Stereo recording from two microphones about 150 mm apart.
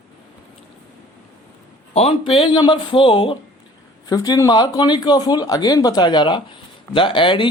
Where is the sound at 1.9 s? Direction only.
45° left (ahead or behind).